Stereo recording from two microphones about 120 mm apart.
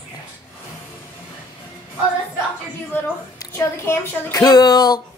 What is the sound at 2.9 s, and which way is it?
A woman's voice, 20° left (ahead or behind).